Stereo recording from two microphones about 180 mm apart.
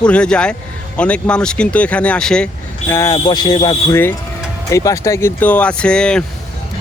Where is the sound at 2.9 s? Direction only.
20° left (ahead or behind).